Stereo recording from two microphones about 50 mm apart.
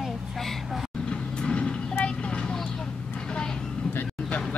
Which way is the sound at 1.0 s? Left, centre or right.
Centre.